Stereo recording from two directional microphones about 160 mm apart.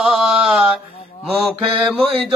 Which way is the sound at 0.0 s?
Centre (ahead or behind).